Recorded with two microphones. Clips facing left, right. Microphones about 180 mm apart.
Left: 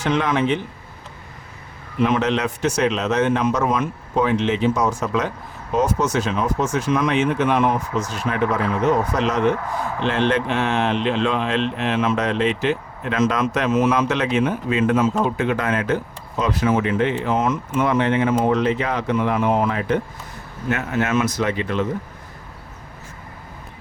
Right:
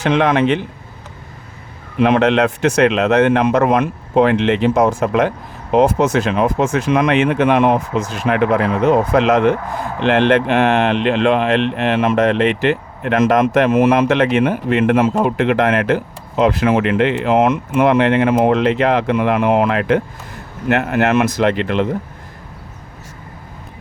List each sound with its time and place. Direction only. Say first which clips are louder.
0.0 s speech: right 6 dB; 65° right (ahead or behind)
2.0 s speech: right 6 dB; 70° right (ahead or behind)
6.3 s speech: right 5 dB; 65° right (ahead or behind)